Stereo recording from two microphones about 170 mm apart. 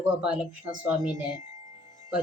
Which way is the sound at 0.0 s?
5° right (ahead or behind).